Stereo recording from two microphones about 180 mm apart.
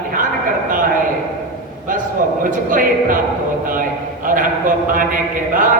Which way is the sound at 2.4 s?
50° right (ahead or behind).